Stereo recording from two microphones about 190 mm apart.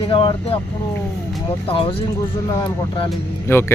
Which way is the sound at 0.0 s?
30° left (ahead or behind).